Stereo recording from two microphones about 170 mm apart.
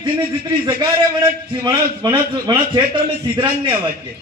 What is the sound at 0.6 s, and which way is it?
A man's voice, 20° right (ahead or behind).